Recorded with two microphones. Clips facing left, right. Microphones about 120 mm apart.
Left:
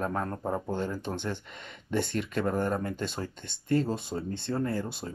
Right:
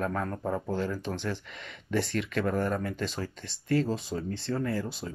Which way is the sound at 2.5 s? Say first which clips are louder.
Even; 25° left (ahead or behind).